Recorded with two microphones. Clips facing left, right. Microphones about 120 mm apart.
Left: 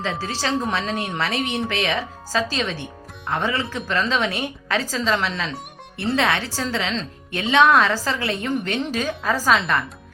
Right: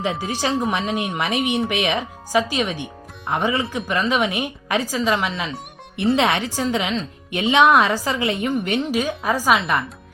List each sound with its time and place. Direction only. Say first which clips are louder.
0.0 s speech: right 3 dB; 15° right (ahead or behind)